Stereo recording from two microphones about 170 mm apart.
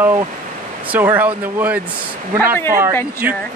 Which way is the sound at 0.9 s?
10° right (ahead or behind).